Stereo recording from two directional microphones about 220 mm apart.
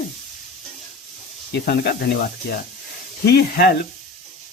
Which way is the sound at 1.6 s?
45° left (ahead or behind).